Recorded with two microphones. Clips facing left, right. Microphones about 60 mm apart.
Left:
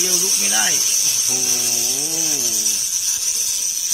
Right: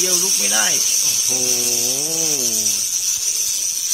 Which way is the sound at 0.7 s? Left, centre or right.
Centre.